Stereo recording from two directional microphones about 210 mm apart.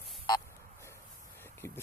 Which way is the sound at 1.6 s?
10° left (ahead or behind).